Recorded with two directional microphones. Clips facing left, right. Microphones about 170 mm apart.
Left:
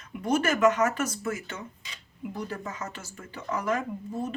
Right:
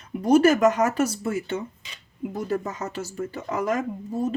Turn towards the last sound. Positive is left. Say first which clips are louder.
# right 5 dB
turn(degrees=-40)  # may be behind; listen again after turning